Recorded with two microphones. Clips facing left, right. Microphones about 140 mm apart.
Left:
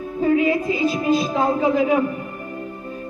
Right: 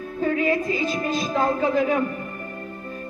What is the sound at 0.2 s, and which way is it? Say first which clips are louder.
A man's voice: left 4 dB; 15° left (ahead or behind).